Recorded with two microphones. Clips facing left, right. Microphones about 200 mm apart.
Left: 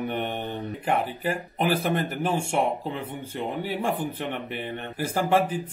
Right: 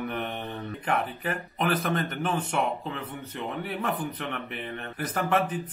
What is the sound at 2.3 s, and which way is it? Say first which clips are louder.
Speech: left 4 dB; 25° left (ahead or behind).